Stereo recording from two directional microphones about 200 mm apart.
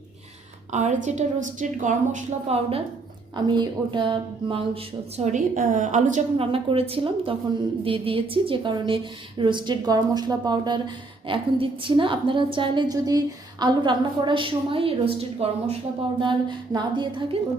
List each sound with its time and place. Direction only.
0.7 s speech: 35° right (ahead or behind)
6.3 s a woman's voice: 25° right (ahead or behind)